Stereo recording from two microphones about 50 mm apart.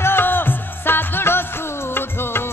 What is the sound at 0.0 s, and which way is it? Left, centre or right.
Music, left.